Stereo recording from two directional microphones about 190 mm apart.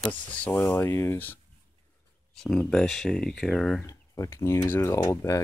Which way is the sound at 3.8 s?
15° left (ahead or behind).